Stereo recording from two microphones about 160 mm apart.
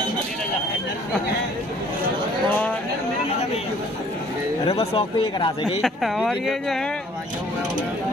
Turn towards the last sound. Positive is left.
turn(degrees=0)  # may be behind; listen again after turning